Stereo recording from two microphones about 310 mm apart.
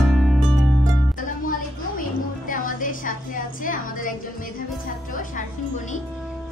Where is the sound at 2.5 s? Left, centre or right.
Left.